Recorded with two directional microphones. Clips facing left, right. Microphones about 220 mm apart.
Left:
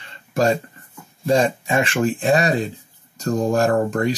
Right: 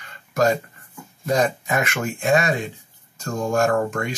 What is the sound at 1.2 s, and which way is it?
Speech, 30° left (ahead or behind).